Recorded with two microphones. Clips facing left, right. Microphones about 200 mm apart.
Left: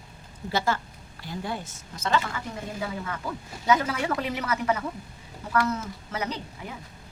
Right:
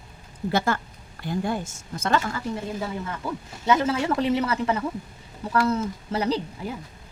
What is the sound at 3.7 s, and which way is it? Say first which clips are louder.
A woman's voice: right 3 dB; 25° right (ahead or behind).